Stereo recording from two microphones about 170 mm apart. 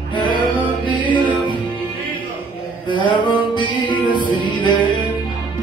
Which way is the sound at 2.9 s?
30° left (ahead or behind).